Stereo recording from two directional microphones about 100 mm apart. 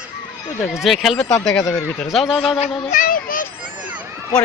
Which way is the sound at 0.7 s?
5° right (ahead or behind).